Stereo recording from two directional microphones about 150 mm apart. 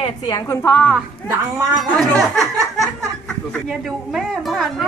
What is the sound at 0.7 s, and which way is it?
Speech, 5° left (ahead or behind).